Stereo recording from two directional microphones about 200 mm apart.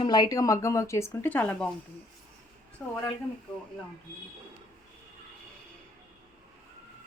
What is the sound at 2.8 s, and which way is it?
Speech, 10° left (ahead or behind).